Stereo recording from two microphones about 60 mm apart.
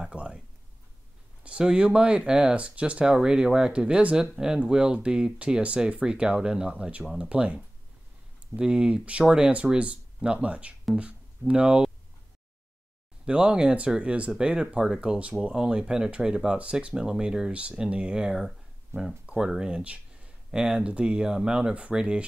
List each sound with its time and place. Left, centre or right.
0.1 s a sound: centre
1.4 s speech: centre
13.2 s speech: centre
18.9 s speech: right
19.3 s speech: centre